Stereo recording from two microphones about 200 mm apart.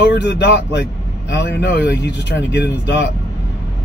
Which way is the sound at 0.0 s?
60° left (ahead or behind).